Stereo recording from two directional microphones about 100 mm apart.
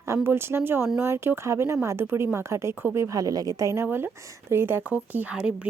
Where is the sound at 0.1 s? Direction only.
25° right (ahead or behind).